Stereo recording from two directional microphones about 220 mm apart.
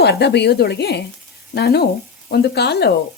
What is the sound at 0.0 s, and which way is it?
Speech, 50° left (ahead or behind).